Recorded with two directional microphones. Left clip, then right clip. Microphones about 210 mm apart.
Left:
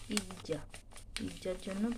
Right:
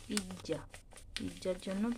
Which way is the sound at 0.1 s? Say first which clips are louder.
Left 1 dB; 10° left (ahead or behind).